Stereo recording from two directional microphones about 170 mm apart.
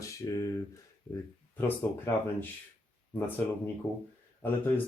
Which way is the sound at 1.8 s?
10° left (ahead or behind).